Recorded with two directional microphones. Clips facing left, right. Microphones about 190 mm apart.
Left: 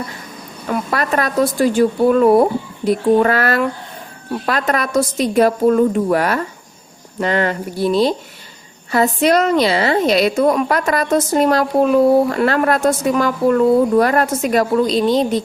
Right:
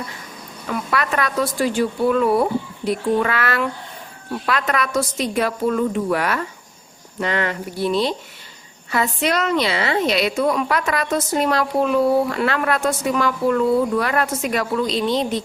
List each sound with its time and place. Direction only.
0.7 s a woman's voice: 40° left (ahead or behind)